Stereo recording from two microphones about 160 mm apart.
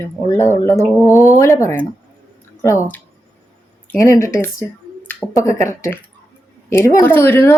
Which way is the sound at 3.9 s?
20° left (ahead or behind).